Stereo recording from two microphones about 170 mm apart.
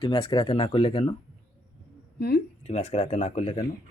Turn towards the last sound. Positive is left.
turn(degrees=40)  # may be behind; listen again after turning